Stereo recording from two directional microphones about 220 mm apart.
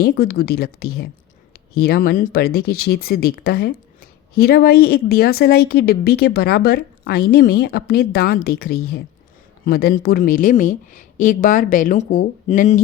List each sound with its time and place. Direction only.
0.0 s a woman's voice: 45° left (ahead or behind)